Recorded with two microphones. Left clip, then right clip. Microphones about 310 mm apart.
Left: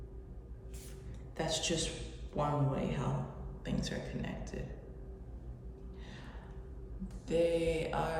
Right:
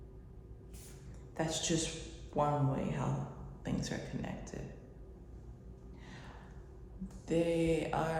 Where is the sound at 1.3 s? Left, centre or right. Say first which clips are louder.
Left 1 dB; right.